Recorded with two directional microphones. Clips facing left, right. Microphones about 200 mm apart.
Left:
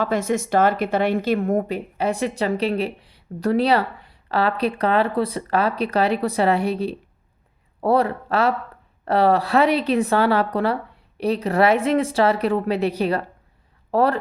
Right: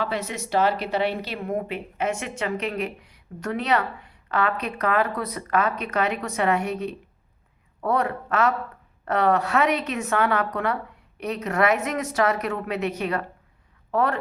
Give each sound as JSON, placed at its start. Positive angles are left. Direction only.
{"t": 0.0, "sound": "speech", "side_deg": 45}